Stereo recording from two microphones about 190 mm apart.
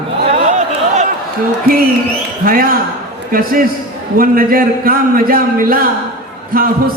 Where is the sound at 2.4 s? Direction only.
50° right (ahead or behind).